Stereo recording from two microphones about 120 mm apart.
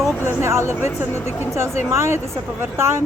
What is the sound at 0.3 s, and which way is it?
A woman's voice, 20° right (ahead or behind).